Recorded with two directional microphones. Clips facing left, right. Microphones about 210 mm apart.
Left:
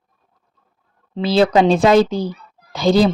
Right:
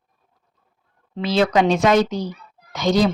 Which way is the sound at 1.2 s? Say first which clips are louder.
Left 4 dB; 30° left (ahead or behind).